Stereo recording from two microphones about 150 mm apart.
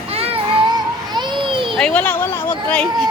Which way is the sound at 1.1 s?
30° right (ahead or behind).